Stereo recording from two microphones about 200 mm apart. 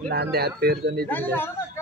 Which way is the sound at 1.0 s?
10° left (ahead or behind).